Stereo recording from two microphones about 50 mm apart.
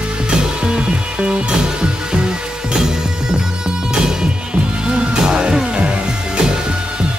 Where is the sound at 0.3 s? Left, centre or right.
Centre.